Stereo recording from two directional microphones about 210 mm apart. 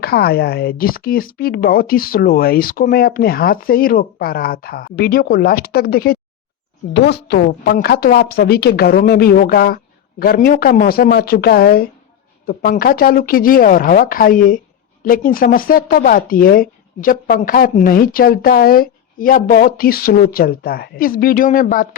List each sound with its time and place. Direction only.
0.0 s speech: 50° left (ahead or behind)